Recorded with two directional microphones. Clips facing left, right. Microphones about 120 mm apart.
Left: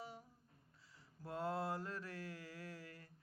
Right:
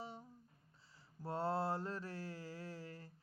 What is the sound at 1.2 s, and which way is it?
Mantra, 30° right (ahead or behind).